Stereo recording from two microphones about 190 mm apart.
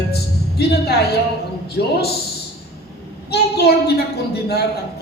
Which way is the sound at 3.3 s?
60° left (ahead or behind).